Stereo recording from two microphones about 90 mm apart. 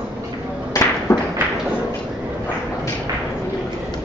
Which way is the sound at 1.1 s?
40° left (ahead or behind).